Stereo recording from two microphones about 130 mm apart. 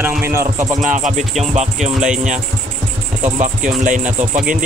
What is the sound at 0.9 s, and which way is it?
Music, 70° right (ahead or behind).